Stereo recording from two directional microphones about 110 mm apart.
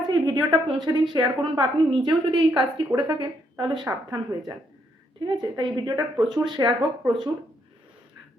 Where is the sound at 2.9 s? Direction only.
25° right (ahead or behind).